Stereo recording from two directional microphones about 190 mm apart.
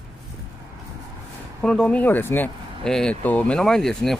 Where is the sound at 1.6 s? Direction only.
5° left (ahead or behind).